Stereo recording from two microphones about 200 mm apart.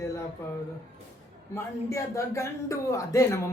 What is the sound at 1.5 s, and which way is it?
A man's voice, 15° left (ahead or behind).